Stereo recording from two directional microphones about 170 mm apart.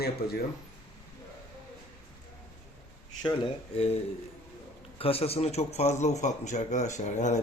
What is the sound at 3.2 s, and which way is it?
Speech, 35° left (ahead or behind).